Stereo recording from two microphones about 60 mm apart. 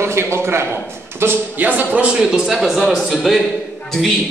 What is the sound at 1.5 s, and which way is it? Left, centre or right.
Speech, right.